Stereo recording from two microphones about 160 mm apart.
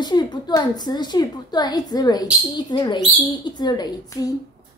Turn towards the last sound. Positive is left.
turn(degrees=25)  # may be behind; listen again after turning